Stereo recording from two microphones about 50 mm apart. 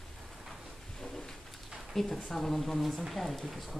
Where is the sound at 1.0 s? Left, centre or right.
Centre.